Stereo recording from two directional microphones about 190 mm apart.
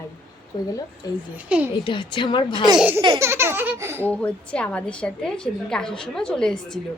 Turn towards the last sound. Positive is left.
turn(degrees=5)  # may be behind; listen again after turning